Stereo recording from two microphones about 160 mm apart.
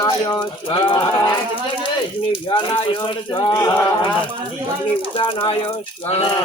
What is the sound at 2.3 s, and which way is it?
Speech, 30° left (ahead or behind).